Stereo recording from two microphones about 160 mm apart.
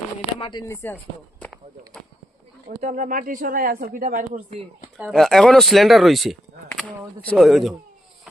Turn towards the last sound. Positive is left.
turn(degrees=0)  # may be behind; listen again after turning